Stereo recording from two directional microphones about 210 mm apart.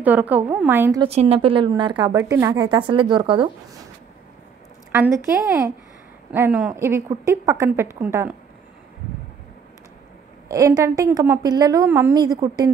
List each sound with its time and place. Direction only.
0.0 s a woman's voice: 10° right (ahead or behind)
1.0 s speech: 25° right (ahead or behind)
4.9 s a woman's voice: 10° right (ahead or behind)
10.5 s a woman's voice: 15° right (ahead or behind)